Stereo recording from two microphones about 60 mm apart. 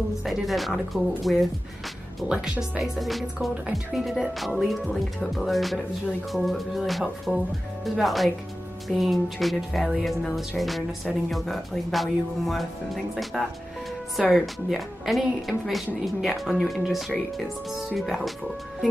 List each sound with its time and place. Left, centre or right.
0.2 s speech: centre
2.2 s speech: centre
2.8 s speech: centre